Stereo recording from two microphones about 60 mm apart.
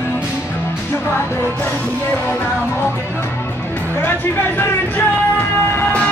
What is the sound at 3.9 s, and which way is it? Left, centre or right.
Music, left.